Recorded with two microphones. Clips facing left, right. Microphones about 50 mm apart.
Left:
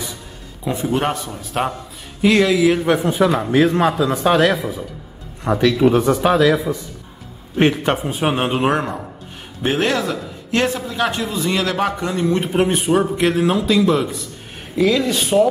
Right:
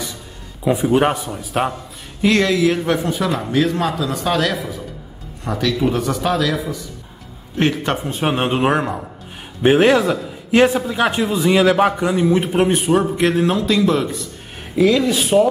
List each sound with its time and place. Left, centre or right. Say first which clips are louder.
0.7 s a man's voice: right 4 dB; centre
3.1 s speech: left 4 dB; left
7.5 s a man's voice: left 2 dB; centre
9.6 s a man's voice: right 6 dB; centre